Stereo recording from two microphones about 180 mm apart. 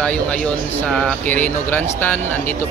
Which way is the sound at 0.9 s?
5° left (ahead or behind).